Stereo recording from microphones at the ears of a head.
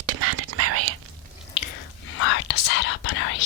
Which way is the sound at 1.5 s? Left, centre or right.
Left.